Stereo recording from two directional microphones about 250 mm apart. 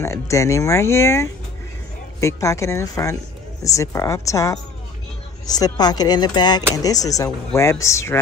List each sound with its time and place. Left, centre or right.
0.0 s speech: centre